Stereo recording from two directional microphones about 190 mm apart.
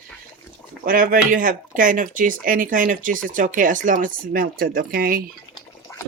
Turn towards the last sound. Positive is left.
turn(degrees=15)  # may be behind; listen again after turning